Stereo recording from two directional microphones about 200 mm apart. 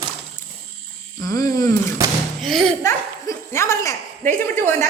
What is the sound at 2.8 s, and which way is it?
Speech, 15° left (ahead or behind).